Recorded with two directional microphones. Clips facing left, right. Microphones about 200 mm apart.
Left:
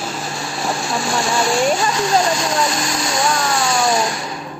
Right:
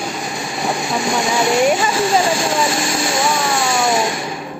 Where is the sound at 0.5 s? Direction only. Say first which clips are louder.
Right 2 dB; centre (ahead or behind).